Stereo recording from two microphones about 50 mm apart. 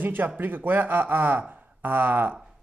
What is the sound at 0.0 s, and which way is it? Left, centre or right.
Speech, right.